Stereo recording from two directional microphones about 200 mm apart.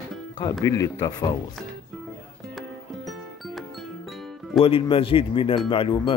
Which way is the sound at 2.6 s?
Centre (ahead or behind).